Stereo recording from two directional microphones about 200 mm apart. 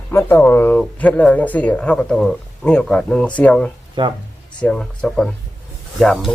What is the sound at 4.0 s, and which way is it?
Speech, 25° right (ahead or behind).